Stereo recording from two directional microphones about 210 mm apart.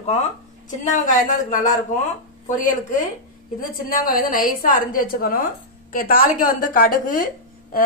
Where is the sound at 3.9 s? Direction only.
40° left (ahead or behind).